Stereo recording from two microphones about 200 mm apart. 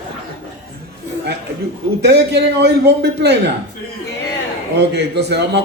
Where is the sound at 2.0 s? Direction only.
55° right (ahead or behind).